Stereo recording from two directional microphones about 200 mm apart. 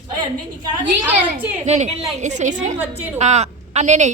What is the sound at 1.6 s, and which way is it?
Speech, 35° right (ahead or behind).